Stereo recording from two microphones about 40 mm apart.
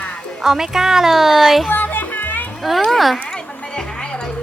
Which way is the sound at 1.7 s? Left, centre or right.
Left.